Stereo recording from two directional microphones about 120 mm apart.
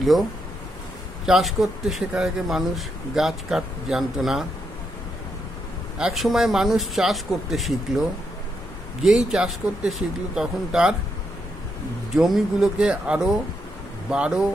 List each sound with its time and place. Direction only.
1.2 s speech: 5° right (ahead or behind)
5.9 s speech: 5° right (ahead or behind)
12.2 s speech: 5° right (ahead or behind)